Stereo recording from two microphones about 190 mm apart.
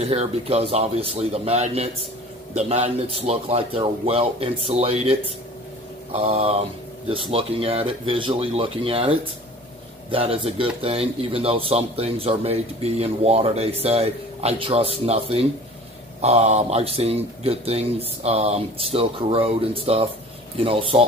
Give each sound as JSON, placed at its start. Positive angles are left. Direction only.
{"t": 0.0, "sound": "speech", "side_deg": -35}
{"t": 6.1, "sound": "speech", "side_deg": -30}